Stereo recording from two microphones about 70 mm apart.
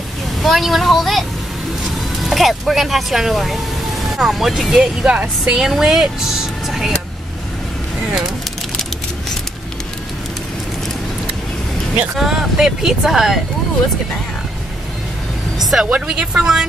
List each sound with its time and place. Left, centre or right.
0.4 s speech: centre
2.2 s speech: centre
5.2 s speech: centre
5.6 s speech: centre
12.2 s speech: centre
15.8 s speech: centre